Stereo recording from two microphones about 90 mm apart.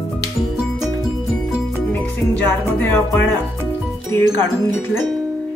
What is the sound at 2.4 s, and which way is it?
Music, 20° left (ahead or behind).